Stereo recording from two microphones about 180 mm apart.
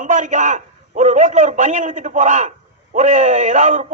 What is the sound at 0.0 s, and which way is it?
A man's voice, 45° right (ahead or behind).